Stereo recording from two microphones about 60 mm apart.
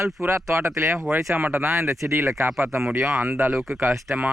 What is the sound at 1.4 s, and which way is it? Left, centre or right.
Speech, right.